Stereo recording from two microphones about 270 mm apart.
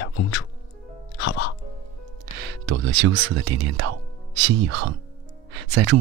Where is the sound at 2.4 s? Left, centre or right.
Right.